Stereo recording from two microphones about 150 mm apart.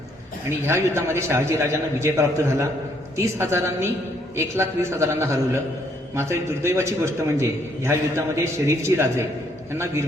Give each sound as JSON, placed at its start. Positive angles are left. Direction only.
{"t": 0.7, "sound": "a man's voice", "side_deg": -20}